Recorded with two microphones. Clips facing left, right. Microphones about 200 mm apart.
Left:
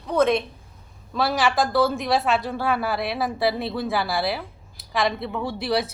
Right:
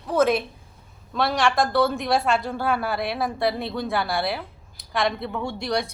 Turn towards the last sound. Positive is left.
turn(degrees=5)  # may be behind; listen again after turning